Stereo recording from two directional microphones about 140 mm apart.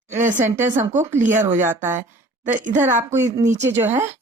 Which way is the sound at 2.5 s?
65° right (ahead or behind).